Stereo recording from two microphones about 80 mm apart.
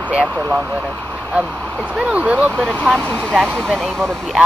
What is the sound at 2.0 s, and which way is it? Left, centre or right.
Speech, centre.